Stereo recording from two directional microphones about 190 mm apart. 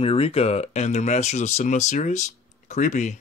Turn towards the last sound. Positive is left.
turn(degrees=40)  # may be behind; listen again after turning